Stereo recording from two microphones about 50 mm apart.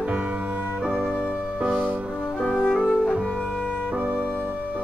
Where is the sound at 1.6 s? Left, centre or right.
Right.